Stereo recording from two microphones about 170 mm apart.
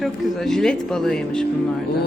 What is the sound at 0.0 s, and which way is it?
Speech, 5° left (ahead or behind).